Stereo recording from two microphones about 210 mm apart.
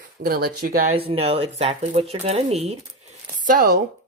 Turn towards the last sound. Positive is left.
turn(degrees=-45)  # may be behind; listen again after turning